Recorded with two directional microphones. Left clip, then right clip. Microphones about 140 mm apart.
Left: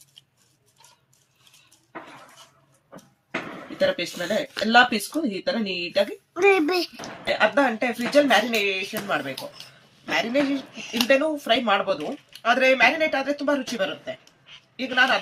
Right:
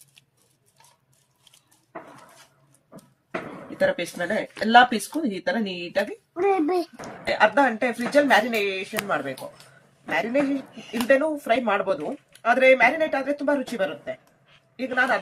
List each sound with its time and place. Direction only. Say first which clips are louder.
3.8 s speech: even; 25° right (ahead or behind)
7.3 s speech: right 1 dB; 15° right (ahead or behind)